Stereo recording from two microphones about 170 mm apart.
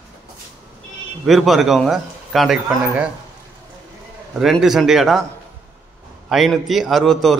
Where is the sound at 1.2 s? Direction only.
Centre (ahead or behind).